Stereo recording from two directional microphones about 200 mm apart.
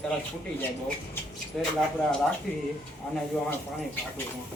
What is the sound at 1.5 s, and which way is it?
Speech, centre (ahead or behind).